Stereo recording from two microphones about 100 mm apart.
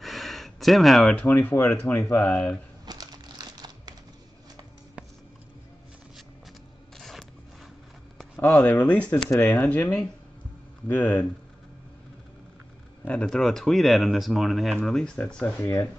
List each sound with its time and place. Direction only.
0.0 s a sound: centre (ahead or behind)
1.1 s speech: 20° left (ahead or behind)
2.8 s crumpling: 40° right (ahead or behind)
7.0 s a sound: centre (ahead or behind)
8.6 s speech: 15° left (ahead or behind)
13.0 s speech: 10° left (ahead or behind)
15.6 s speech: 30° left (ahead or behind)